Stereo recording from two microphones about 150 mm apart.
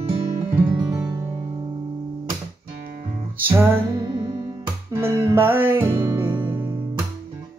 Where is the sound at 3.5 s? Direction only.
15° right (ahead or behind).